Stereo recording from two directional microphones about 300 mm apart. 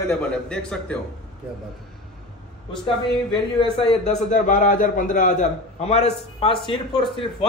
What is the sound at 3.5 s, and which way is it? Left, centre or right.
A man's voice, centre.